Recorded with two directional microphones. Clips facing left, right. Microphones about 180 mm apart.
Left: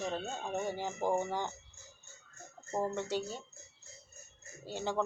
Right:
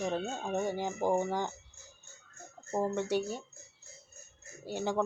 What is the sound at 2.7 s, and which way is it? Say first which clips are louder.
Speech: right 3 dB; 10° right (ahead or behind).